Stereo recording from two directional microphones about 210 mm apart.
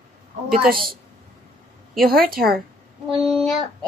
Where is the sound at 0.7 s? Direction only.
45° right (ahead or behind).